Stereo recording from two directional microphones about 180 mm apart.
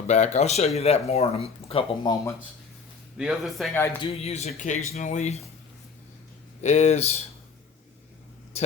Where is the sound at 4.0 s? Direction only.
35° left (ahead or behind).